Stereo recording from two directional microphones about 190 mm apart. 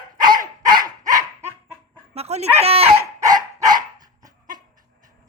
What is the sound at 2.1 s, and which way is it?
Dog, 35° right (ahead or behind).